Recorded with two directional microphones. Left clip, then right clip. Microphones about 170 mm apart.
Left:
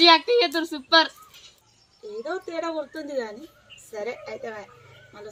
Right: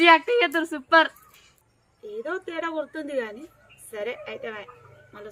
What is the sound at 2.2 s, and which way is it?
Speech, 25° right (ahead or behind).